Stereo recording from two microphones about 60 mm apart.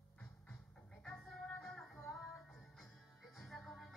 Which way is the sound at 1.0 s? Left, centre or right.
Centre.